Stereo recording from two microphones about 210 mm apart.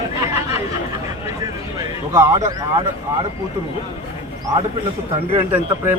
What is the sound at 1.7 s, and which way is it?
Speech, 15° right (ahead or behind).